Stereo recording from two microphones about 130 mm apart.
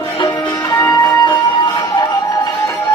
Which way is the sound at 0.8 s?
30° left (ahead or behind).